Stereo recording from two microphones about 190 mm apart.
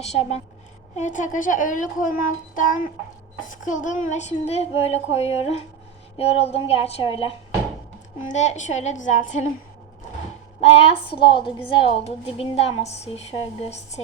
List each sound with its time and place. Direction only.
0.0 s a woman's voice: 35° left (ahead or behind)
10.6 s a woman's voice: 30° left (ahead or behind)